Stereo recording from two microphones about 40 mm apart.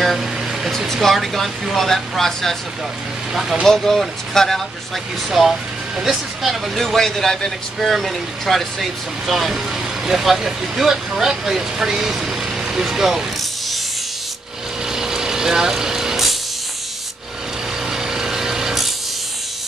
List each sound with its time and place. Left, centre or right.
0.0 s air conditioning: centre
1.0 s speech: centre
3.6 s speech: centre
5.3 s speech: centre
7.0 s speech: centre
14.9 s vehicle: centre
17.9 s light engine: centre